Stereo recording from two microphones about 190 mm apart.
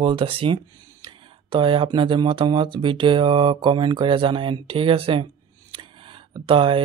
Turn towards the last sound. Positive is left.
turn(degrees=-25)  # may be behind; listen again after turning